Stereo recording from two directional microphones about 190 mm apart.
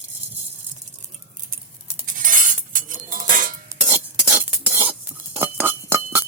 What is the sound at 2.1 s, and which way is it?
Chink, 45° right (ahead or behind).